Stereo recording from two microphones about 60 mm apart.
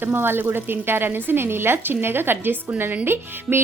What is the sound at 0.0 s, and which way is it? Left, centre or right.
A woman's voice, right.